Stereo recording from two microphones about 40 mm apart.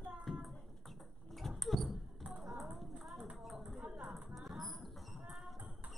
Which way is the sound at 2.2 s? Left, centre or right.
Centre.